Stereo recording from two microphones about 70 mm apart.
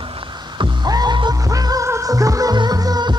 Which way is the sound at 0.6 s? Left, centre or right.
Right.